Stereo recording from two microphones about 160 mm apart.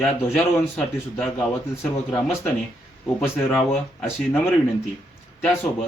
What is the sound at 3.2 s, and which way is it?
Speech, centre (ahead or behind).